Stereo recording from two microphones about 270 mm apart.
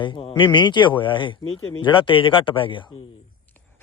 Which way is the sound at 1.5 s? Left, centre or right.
Left.